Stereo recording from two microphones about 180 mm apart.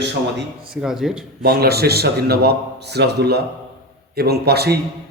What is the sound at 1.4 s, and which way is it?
A man's voice, 55° right (ahead or behind).